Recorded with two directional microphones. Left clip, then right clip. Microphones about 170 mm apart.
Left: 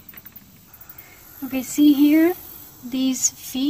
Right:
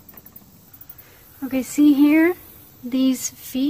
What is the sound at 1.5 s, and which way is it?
Speech, 35° right (ahead or behind).